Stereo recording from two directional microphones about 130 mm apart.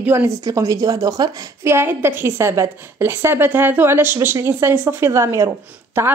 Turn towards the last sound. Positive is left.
turn(degrees=-20)  # may be behind; listen again after turning